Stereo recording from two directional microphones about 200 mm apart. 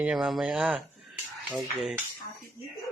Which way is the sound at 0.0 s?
5° right (ahead or behind).